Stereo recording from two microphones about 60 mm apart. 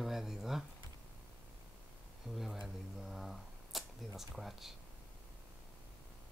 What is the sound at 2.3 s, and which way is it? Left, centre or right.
Speech, right.